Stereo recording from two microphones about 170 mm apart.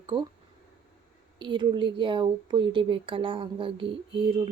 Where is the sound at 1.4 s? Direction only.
30° right (ahead or behind).